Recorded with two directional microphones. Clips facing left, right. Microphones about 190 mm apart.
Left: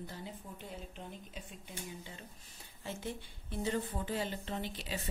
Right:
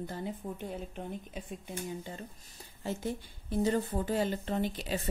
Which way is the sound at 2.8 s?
40° right (ahead or behind).